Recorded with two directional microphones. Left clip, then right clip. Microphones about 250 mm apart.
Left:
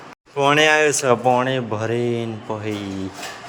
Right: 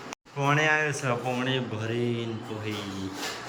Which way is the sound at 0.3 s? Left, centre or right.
Left.